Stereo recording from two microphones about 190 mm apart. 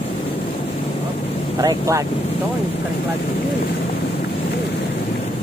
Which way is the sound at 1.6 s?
20° right (ahead or behind).